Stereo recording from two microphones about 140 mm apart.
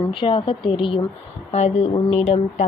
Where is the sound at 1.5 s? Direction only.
50° left (ahead or behind).